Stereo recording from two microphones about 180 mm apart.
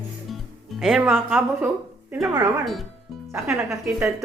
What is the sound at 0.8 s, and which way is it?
A woman's voice, 5° right (ahead or behind).